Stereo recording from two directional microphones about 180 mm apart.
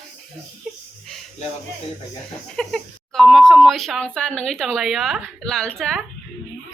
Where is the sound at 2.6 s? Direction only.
5° left (ahead or behind).